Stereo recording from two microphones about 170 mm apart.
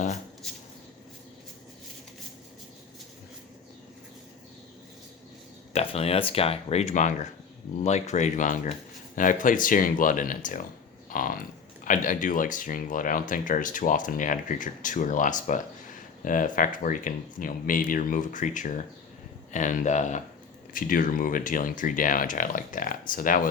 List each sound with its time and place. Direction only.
0.4 s a sound: 5° left (ahead or behind)
5.7 s speech: 35° left (ahead or behind)
20.7 s speech: 55° left (ahead or behind)